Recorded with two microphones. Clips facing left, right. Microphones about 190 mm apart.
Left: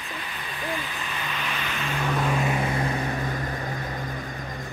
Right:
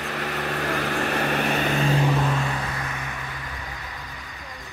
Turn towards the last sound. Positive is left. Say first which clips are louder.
# left 6 dB
turn(degrees=35)  # may be behind; listen again after turning